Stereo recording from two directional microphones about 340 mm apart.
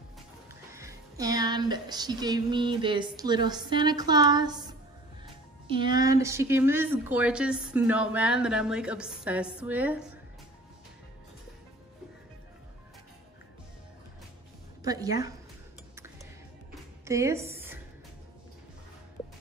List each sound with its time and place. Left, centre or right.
0.7 s music: centre
5.7 s speech: centre
14.8 s a woman's voice: centre
17.0 s a woman's voice: centre